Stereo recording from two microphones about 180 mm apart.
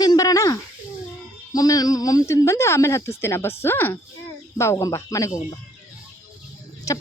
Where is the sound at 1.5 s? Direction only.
20° left (ahead or behind).